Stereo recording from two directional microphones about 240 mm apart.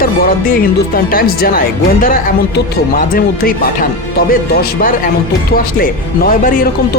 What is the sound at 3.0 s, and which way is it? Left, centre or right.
Speech, left.